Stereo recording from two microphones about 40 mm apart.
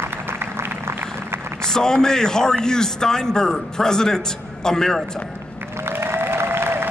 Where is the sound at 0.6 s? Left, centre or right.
Right.